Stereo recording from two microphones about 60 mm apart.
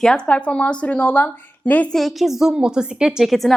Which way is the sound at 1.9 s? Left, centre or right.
Centre.